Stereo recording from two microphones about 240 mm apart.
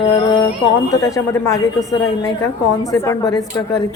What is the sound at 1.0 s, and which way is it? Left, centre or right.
Speech, centre.